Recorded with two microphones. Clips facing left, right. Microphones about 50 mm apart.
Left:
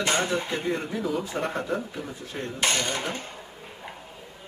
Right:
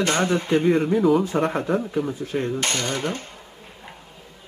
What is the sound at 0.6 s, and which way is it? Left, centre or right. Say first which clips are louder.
A man's voice: right 10 dB; centre.